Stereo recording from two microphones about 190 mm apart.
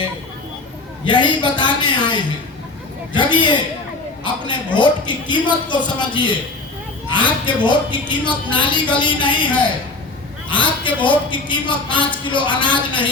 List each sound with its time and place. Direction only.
1.0 s a man's voice: 25° left (ahead or behind)
7.4 s a man's voice: 25° left (ahead or behind)
10.5 s a man's voice: 25° left (ahead or behind)